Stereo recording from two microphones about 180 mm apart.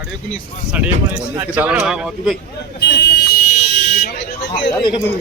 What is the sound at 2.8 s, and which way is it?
Buzzer, 70° left (ahead or behind).